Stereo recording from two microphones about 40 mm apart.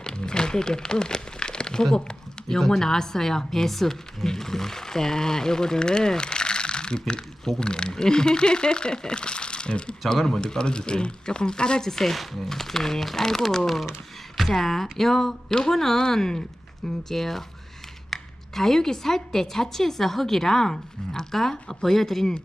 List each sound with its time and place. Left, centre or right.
0.0 s a sound: centre
2.6 s a woman's voice: centre; by 9.9 s left
10.2 s a woman's voice: centre
10.4 s speech: left
11.9 s a woman's voice: centre